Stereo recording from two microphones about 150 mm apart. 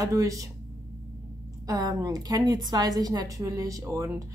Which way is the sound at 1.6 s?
25° right (ahead or behind).